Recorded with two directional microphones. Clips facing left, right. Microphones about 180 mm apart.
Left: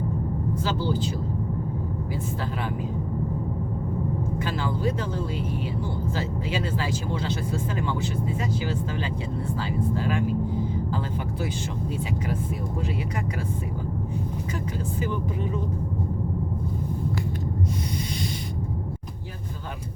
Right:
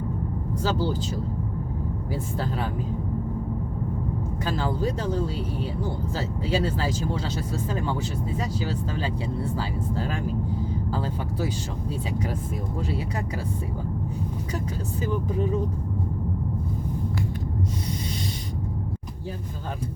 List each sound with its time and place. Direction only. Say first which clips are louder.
0.6 s speech: right 3 dB; 40° right (ahead or behind)
4.4 s speech: right 4 dB; 35° right (ahead or behind)
6.5 s speech: right 5 dB; 35° right (ahead or behind)
9.4 s speech: left 1 dB; 35° right (ahead or behind)